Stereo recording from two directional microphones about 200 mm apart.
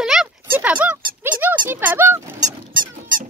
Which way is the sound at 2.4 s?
45° right (ahead or behind).